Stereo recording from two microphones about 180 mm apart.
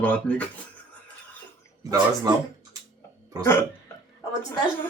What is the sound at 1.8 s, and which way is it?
Speech, 20° right (ahead or behind).